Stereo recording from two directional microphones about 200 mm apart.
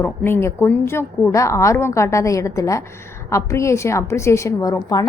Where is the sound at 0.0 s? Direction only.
10° left (ahead or behind).